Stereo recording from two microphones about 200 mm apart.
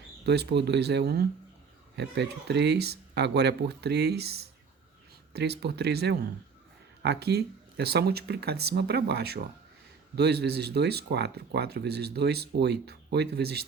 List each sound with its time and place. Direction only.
0.3 s speech: 55° right (ahead or behind)